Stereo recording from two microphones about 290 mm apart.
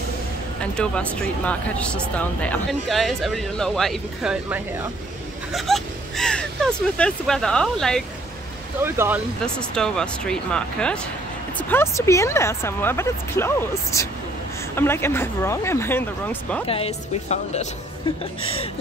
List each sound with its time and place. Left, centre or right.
0.6 s speech: centre
16.6 s speech: centre